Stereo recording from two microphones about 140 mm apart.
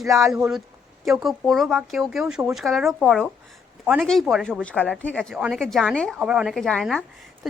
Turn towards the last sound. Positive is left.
turn(degrees=0)  # may be behind; listen again after turning